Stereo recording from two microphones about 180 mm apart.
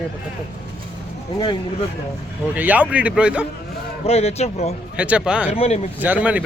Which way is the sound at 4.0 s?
35° left (ahead or behind).